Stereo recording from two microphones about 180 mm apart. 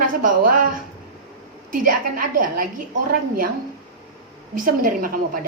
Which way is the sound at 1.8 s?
50° right (ahead or behind).